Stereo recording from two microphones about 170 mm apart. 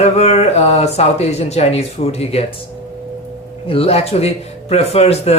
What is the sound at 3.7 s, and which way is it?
Speech, 35° left (ahead or behind).